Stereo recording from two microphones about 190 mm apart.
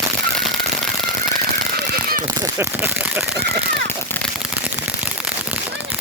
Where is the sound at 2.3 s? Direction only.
10° right (ahead or behind).